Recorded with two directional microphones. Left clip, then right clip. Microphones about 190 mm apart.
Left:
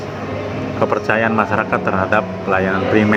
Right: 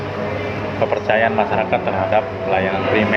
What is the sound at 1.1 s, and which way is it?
Speech, 50° left (ahead or behind).